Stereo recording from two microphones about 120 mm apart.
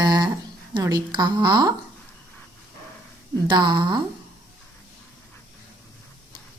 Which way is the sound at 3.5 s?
40° right (ahead or behind).